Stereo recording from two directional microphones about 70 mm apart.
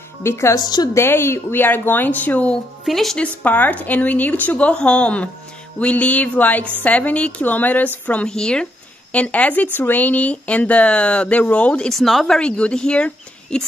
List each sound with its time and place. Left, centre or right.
0.2 s speech: left; by 2.6 s centre
2.9 s speech: centre
3.2 s speech: left
8.3 s speech: centre
11.9 s speech: centre
12.4 s speech: centre